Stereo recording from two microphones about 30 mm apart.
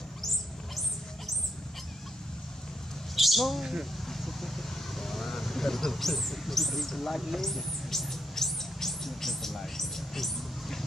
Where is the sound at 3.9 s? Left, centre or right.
Centre.